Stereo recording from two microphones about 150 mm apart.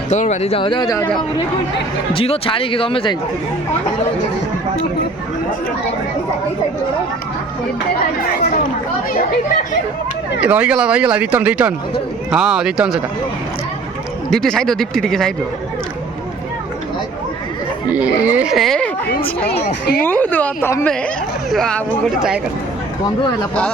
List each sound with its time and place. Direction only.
0.1 s speech: 50° left (ahead or behind); by 0.9 s 30° left (ahead or behind)
2.1 s speech: 40° left (ahead or behind)
10.4 s speech: 10° right (ahead or behind)
14.3 s speech: 5° left (ahead or behind)
17.9 s speech: 10° right (ahead or behind)
19.5 s speech: 90° left
20.0 s a woman's voice: 10° left (ahead or behind)
21.5 s speech: 5° left (ahead or behind)